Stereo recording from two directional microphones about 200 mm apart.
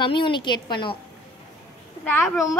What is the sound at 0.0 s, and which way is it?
Speech, 25° left (ahead or behind).